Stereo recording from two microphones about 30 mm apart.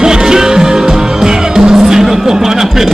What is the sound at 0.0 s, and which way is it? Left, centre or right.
Music, right.